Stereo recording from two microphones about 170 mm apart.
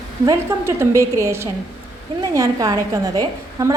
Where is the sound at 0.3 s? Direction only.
15° right (ahead or behind).